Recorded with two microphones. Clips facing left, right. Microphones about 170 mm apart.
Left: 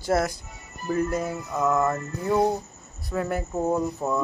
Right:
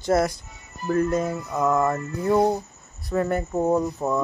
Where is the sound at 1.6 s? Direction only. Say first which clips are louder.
Right 2 dB; 10° right (ahead or behind).